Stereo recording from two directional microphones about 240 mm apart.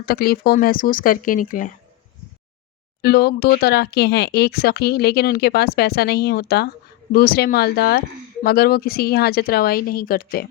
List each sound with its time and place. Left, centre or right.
0.0 s speech: left
3.0 s speech: left